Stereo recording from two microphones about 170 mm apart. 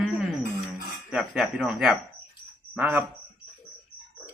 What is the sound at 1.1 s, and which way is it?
A man's voice, centre (ahead or behind).